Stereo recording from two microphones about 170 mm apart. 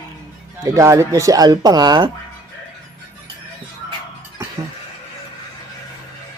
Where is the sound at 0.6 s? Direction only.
20° right (ahead or behind).